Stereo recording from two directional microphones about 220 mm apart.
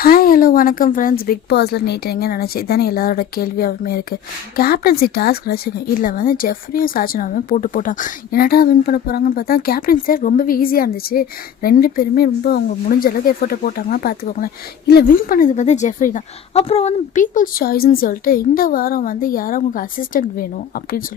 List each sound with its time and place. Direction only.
0.0 s speech: 40° left (ahead or behind)